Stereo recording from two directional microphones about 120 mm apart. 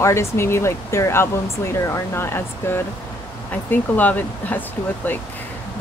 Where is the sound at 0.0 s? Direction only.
20° left (ahead or behind).